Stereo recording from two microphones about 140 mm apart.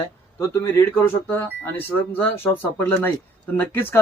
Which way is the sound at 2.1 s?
15° left (ahead or behind).